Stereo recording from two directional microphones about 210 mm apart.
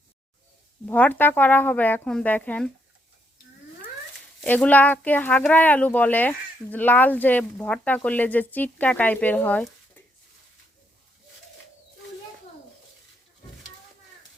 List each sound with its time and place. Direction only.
0.9 s speech: 10° left (ahead or behind)
4.4 s speech: 5° left (ahead or behind)